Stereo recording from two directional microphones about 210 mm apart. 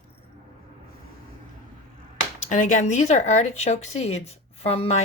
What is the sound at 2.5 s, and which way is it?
Speech, 35° left (ahead or behind).